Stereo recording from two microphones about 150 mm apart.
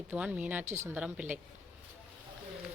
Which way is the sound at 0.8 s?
10° right (ahead or behind).